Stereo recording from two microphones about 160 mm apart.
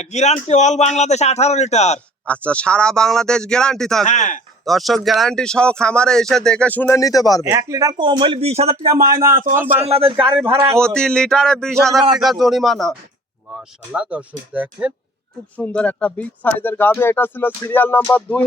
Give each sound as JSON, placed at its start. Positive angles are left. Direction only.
{"t": 0.0, "sound": "speech", "side_deg": 45}
{"t": 2.2, "sound": "speech", "side_deg": 10}
{"t": 4.0, "sound": "speech", "side_deg": 50}
{"t": 4.6, "sound": "speech", "side_deg": 0}
{"t": 7.4, "sound": "a man's voice", "side_deg": -20}
{"t": 9.0, "sound": "speech", "side_deg": -20}
{"t": 9.3, "sound": "speech", "side_deg": -60}
{"t": 9.8, "sound": "a man's voice", "side_deg": -35}
{"t": 10.8, "sound": "speech", "side_deg": 5}
{"t": 15.5, "sound": "speech", "side_deg": 10}